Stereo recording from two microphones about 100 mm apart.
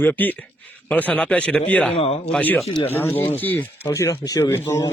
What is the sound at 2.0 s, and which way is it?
Speech, 75° left (ahead or behind).